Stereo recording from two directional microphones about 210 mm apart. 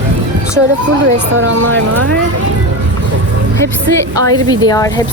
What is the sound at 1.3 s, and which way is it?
Speech, 70° right (ahead or behind).